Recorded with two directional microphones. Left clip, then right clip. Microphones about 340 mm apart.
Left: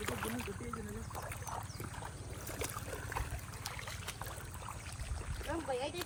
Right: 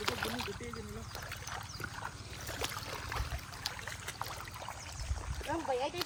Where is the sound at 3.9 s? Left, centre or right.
Right.